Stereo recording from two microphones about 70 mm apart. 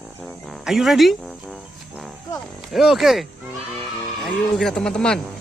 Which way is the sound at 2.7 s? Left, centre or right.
Centre.